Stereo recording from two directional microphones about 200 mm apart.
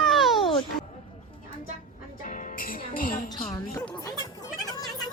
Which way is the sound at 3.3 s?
20° left (ahead or behind).